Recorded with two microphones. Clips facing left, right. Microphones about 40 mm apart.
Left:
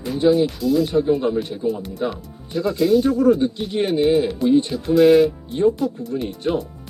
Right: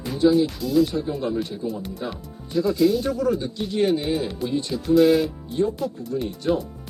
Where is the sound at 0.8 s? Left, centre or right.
Left.